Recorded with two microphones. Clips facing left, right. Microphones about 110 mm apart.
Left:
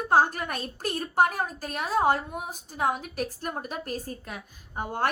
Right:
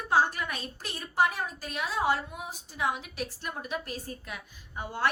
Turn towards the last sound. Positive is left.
turn(degrees=50)  # may be behind; listen again after turning